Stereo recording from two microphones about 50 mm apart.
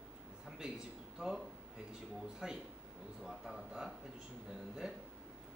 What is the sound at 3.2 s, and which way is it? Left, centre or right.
Speech, centre.